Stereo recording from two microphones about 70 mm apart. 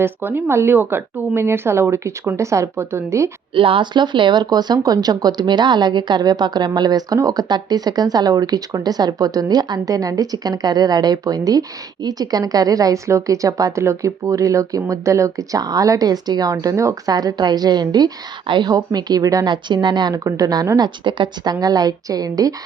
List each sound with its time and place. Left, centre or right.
0.0 s speech: right
3.9 s a woman's voice: right
17.1 s a woman's voice: right
19.5 s speech: right
20.2 s a woman's voice: right
20.7 s a woman's voice: right